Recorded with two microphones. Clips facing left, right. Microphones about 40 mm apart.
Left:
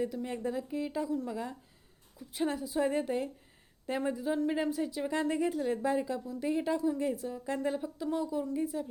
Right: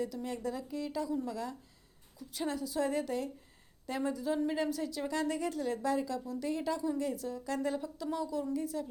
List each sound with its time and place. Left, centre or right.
0.3 s a woman's voice: left